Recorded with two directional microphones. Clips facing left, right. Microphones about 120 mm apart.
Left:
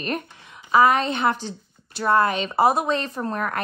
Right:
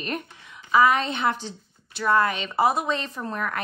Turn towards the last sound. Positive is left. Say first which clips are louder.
# left 3 dB
turn(degrees=45)  # may be behind; listen again after turning